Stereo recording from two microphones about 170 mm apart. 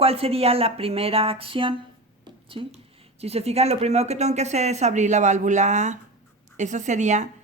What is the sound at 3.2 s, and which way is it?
Speech, 35° right (ahead or behind).